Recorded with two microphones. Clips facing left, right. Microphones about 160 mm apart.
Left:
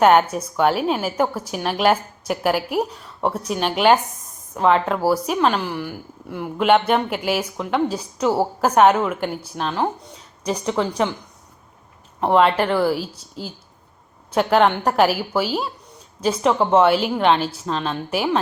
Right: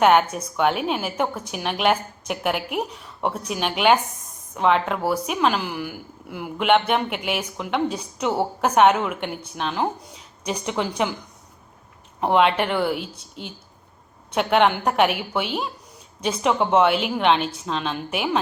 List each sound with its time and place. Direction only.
0.0 s speech: centre (ahead or behind)
2.6 s a woman's voice: 40° left (ahead or behind)
3.2 s speech: centre (ahead or behind)
12.2 s speech: centre (ahead or behind)
12.9 s a woman's voice: 35° left (ahead or behind)
14.3 s speech: centre (ahead or behind)
16.2 s speech: centre (ahead or behind)